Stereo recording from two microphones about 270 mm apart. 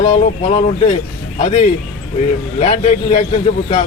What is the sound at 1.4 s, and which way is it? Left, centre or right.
Speech, left.